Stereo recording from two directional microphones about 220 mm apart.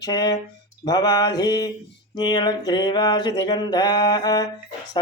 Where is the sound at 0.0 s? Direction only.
15° left (ahead or behind).